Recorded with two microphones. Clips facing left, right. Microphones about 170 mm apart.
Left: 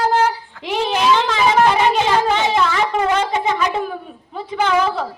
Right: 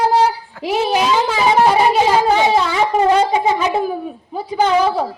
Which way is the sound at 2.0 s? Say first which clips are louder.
Right 3 dB; 40° right (ahead or behind).